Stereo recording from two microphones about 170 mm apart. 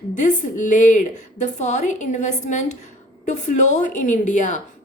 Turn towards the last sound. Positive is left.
turn(degrees=45)  # may be behind; listen again after turning